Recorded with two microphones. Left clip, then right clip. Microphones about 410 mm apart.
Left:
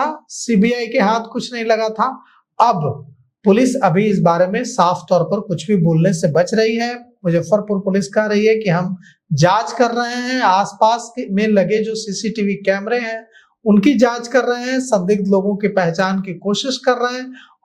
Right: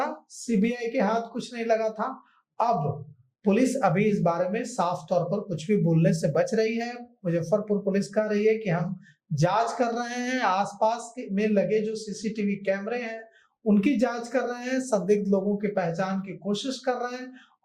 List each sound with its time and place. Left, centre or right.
0.0 s speech: left